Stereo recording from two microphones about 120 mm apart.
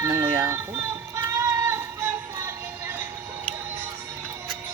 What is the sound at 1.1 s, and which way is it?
Child singing, 25° right (ahead or behind).